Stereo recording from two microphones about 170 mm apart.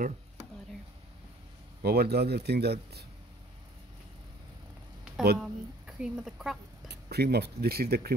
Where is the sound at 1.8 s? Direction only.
70° right (ahead or behind).